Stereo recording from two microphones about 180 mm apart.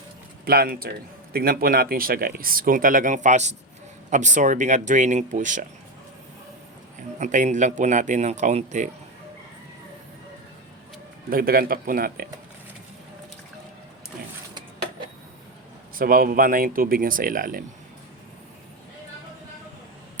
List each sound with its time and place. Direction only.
0.4 s a man's voice: 55° right (ahead or behind)
7.2 s speech: 45° right (ahead or behind)
11.3 s speech: 55° right (ahead or behind)
16.0 s speech: 50° right (ahead or behind)